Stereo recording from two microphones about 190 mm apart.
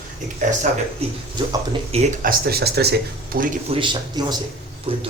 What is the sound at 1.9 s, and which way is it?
Speech, 35° right (ahead or behind).